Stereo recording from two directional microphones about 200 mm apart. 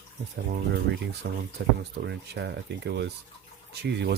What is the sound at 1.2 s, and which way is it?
Speech, 55° right (ahead or behind).